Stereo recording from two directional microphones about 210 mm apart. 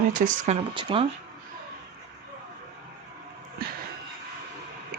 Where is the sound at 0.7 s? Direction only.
25° right (ahead or behind).